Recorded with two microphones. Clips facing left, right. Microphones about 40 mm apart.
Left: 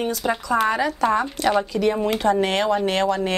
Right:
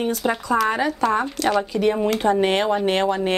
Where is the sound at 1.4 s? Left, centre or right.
Left.